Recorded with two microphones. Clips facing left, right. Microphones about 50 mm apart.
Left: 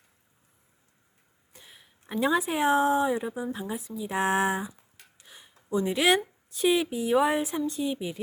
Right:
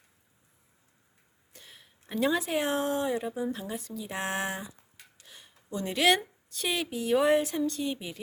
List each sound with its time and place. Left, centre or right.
1.6 s speech: centre
5.2 s a sound: centre
5.7 s speech: centre